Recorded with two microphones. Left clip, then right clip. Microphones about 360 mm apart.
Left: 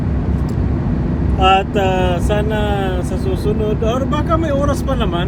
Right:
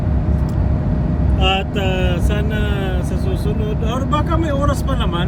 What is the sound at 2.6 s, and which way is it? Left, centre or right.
Speech, left.